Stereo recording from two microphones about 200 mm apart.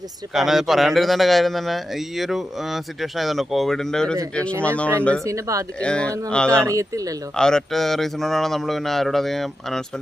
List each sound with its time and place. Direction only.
0.3 s speech: centre (ahead or behind)
5.2 s speech: 15° right (ahead or behind)
5.8 s speech: 5° left (ahead or behind)
6.6 s speech: 15° right (ahead or behind)
7.3 s speech: 5° left (ahead or behind)